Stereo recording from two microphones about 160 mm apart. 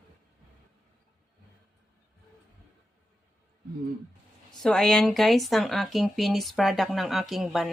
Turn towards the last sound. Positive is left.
turn(degrees=0)  # may be behind; listen again after turning